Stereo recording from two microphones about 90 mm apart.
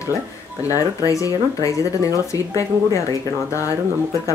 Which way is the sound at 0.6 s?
40° left (ahead or behind).